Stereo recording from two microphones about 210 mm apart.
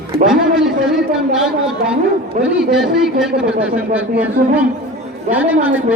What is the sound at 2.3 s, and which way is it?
Speech, 35° right (ahead or behind).